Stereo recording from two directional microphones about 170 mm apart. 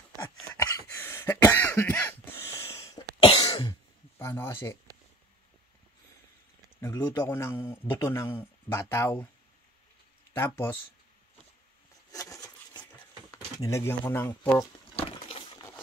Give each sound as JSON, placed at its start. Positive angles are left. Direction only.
{"t": 0.6, "sound": "cough", "side_deg": 15}
{"t": 3.3, "sound": "cough", "side_deg": 30}
{"t": 4.2, "sound": "speech", "side_deg": 15}
{"t": 6.8, "sound": "a man's voice", "side_deg": 15}
{"t": 10.3, "sound": "a man's voice", "side_deg": 15}
{"t": 12.1, "sound": "a sound", "side_deg": 20}
{"t": 13.6, "sound": "a man's voice", "side_deg": 15}
{"t": 15.0, "sound": "a sound", "side_deg": 35}